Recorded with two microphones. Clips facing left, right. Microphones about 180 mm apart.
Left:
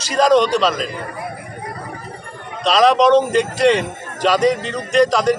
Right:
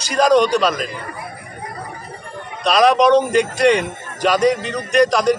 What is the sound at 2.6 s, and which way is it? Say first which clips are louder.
Speech: even; centre (ahead or behind).